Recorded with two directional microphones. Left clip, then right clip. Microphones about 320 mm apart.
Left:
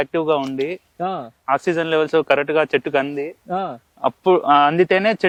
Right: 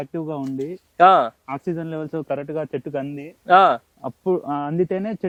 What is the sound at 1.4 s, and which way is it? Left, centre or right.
Speech, centre.